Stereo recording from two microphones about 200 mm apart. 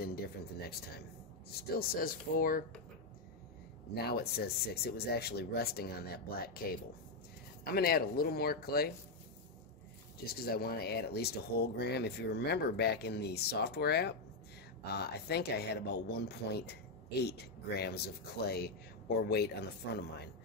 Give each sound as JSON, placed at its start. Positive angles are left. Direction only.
{"t": 1.5, "sound": "speech", "side_deg": 50}
{"t": 3.9, "sound": "speech", "side_deg": 50}
{"t": 7.6, "sound": "speech", "side_deg": 50}
{"t": 10.2, "sound": "speech", "side_deg": 50}